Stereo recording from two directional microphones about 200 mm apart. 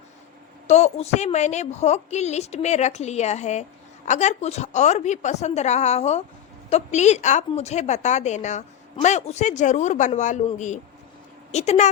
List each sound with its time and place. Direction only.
0.7 s a woman's voice: 30° left (ahead or behind)